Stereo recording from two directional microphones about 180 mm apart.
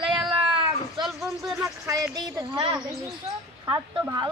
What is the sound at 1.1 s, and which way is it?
Speech, 5° right (ahead or behind).